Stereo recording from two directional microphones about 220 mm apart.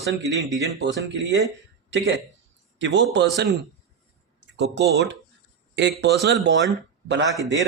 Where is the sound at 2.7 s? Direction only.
55° right (ahead or behind).